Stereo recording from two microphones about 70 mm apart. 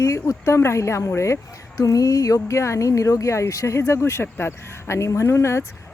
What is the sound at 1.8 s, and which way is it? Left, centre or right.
Speech, left.